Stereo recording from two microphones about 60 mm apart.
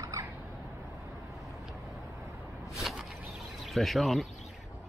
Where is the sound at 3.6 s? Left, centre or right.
Centre.